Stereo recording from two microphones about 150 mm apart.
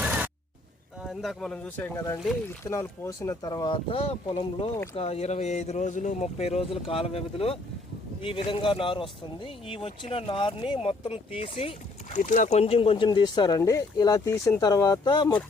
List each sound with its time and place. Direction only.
0.0 s a sound: 10° right (ahead or behind)
1.0 s speech: centre (ahead or behind); by 11.7 s 40° left (ahead or behind)
12.1 s speech: 60° left (ahead or behind); by 15.4 s 30° left (ahead or behind)